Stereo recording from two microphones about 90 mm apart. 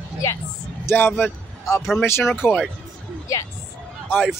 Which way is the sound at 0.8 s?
25° left (ahead or behind).